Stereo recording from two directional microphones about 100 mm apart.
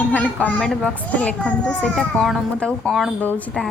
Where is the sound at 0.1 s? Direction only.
15° left (ahead or behind).